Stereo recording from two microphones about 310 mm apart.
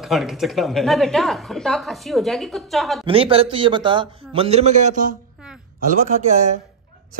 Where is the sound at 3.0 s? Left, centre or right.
Centre.